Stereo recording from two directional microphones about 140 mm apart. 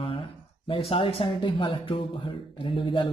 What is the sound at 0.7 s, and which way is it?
Speech, 40° left (ahead or behind).